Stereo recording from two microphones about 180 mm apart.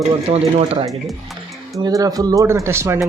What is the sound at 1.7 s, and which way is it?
Speech, 20° right (ahead or behind).